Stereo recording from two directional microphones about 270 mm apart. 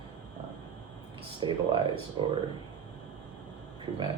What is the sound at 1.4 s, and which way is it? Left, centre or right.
Speech, centre.